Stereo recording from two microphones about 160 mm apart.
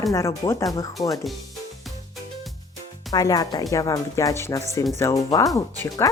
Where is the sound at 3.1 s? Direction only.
25° left (ahead or behind).